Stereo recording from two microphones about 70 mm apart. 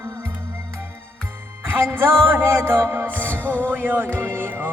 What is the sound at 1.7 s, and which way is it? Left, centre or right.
Music, right.